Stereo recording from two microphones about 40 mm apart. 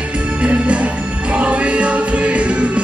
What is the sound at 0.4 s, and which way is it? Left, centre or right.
Music, right.